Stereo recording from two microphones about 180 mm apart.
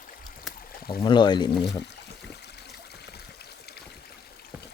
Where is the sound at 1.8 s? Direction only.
70° left (ahead or behind).